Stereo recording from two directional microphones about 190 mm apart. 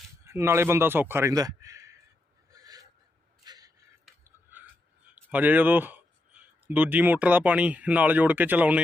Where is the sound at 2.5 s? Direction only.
20° right (ahead or behind).